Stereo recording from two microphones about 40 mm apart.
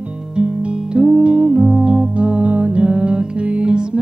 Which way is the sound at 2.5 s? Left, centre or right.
Right.